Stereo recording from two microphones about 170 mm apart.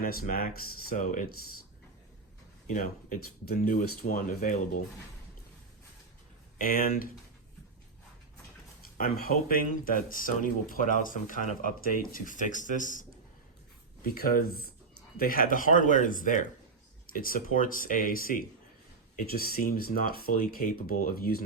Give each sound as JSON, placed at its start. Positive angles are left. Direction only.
{"t": 0.0, "sound": "speech", "side_deg": 60}
{"t": 2.6, "sound": "speech", "side_deg": 55}
{"t": 6.6, "sound": "speech", "side_deg": 55}
{"t": 9.0, "sound": "speech", "side_deg": 60}